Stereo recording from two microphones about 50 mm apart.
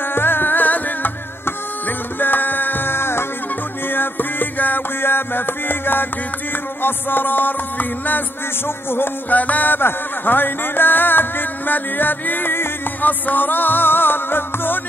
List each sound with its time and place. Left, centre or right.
0.1 s music: left
3.9 s music: left
9.3 s music: left
9.8 s music: left